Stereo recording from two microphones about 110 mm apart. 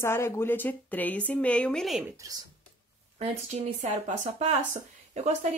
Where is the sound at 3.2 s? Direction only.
80° right.